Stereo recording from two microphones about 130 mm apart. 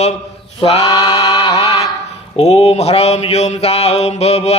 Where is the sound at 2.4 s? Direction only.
50° left (ahead or behind).